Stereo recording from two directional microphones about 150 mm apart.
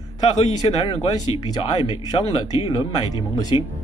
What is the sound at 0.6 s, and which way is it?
Speech, 35° left (ahead or behind).